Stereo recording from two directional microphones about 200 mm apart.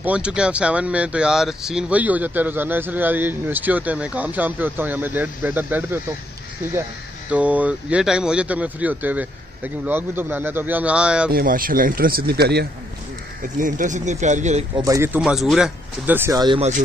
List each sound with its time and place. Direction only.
0.0 s speech: 5° right (ahead or behind)
7.2 s speech: 5° right (ahead or behind)
11.3 s speech: 45° right (ahead or behind)
13.6 s speech: 40° right (ahead or behind)
14.8 s speech: 15° right (ahead or behind)